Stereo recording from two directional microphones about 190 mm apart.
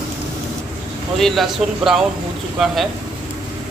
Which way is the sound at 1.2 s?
Centre (ahead or behind).